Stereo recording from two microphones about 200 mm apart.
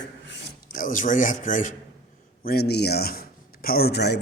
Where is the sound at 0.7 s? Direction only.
40° left (ahead or behind).